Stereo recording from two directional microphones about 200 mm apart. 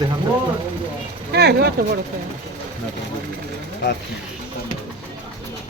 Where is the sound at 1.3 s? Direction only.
55° right (ahead or behind).